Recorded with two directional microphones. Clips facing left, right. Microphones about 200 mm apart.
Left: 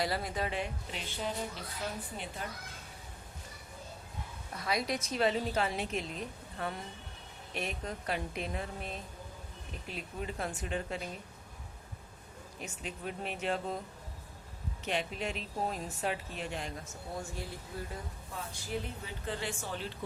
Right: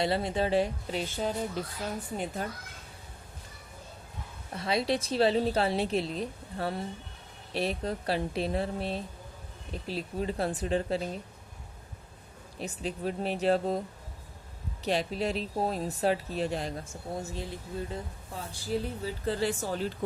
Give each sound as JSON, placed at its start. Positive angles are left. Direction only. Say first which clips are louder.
{"t": 0.0, "sound": "a woman's voice", "louder": "right 6 dB", "side_deg": -25}
{"t": 2.4, "sound": "a woman's voice", "louder": "right 6 dB", "side_deg": -40}
{"t": 4.5, "sound": "a woman's voice", "louder": "right 5 dB", "side_deg": -30}
{"t": 12.5, "sound": "a woman's voice", "louder": "right 8 dB", "side_deg": -35}
{"t": 14.8, "sound": "a woman's voice", "louder": "right 6 dB", "side_deg": -35}
{"t": 17.2, "sound": "a woman's voice", "louder": "right 3 dB", "side_deg": -20}
{"t": 18.5, "sound": "a woman's voice", "louder": "right 8 dB", "side_deg": -35}